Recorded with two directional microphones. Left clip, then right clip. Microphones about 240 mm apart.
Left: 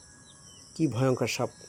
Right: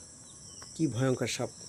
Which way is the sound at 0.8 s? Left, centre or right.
Centre.